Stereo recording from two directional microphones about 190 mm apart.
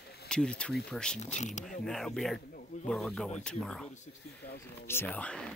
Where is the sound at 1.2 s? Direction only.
40° left (ahead or behind).